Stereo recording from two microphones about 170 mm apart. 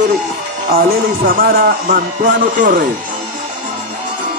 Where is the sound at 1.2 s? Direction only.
55° right (ahead or behind).